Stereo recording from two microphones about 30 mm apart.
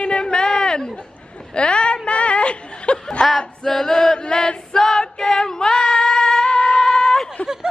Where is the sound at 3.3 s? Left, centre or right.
Centre.